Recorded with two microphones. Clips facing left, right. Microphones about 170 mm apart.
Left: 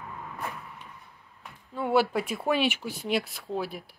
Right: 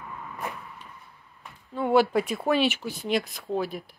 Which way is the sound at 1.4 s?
5° left (ahead or behind).